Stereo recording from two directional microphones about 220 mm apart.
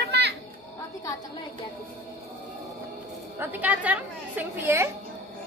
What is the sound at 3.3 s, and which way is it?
A woman's voice, 10° right (ahead or behind).